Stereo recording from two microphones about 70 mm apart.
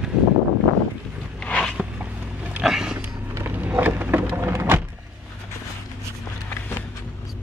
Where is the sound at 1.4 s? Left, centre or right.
Centre.